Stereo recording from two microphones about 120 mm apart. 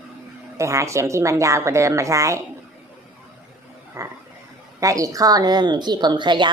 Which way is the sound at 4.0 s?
25° right (ahead or behind).